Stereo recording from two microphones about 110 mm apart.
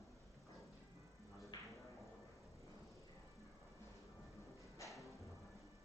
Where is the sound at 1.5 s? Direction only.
40° left (ahead or behind).